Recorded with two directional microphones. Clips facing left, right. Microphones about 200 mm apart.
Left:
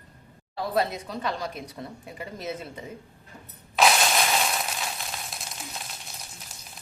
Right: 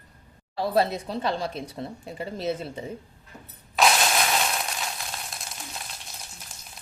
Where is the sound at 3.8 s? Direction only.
Centre (ahead or behind).